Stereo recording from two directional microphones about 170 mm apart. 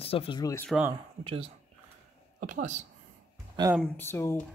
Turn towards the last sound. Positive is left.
turn(degrees=15)  # may be behind; listen again after turning